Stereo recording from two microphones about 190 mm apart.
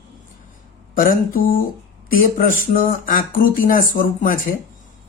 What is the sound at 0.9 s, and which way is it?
Speech, 50° left (ahead or behind).